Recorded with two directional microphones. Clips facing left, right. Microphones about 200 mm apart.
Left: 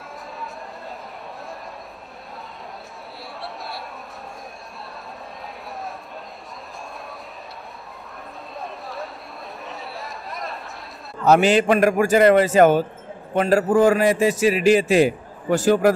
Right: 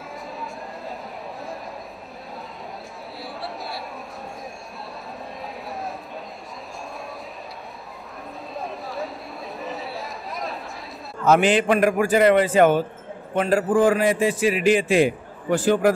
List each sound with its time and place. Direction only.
3.3 s chatter: centre (ahead or behind)
8.5 s a sound: centre (ahead or behind)
9.6 s chatter: centre (ahead or behind)
11.2 s a man's voice: 40° left (ahead or behind)